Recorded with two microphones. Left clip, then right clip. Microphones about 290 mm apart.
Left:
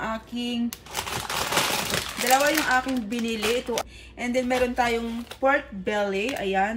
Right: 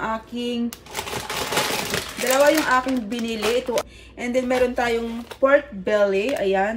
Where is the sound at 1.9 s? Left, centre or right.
Centre.